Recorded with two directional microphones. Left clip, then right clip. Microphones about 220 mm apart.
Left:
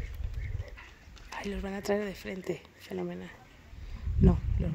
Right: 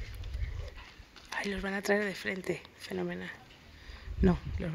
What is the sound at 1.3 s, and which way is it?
Speech, 10° left (ahead or behind).